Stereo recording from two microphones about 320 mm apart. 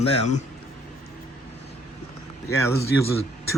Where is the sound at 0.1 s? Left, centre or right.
Left.